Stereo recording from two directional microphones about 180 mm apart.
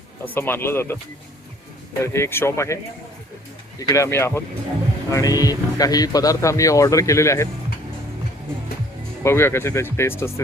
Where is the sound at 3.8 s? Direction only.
20° left (ahead or behind).